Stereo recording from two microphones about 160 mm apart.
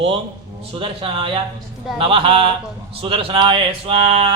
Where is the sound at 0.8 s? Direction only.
30° right (ahead or behind).